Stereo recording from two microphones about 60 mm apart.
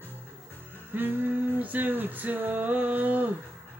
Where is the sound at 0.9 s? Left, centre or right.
Right.